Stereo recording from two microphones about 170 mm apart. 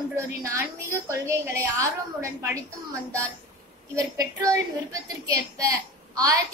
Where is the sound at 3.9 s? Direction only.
20° right (ahead or behind).